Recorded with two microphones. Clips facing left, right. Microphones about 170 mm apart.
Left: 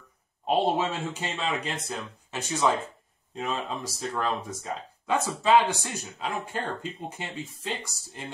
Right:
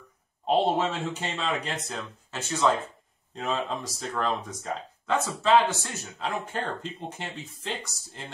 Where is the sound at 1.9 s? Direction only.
15° left (ahead or behind).